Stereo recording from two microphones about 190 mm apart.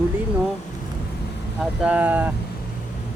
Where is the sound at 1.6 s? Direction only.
5° right (ahead or behind).